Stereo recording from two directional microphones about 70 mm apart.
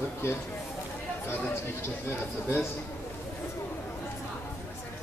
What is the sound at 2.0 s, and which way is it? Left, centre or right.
Speech, left.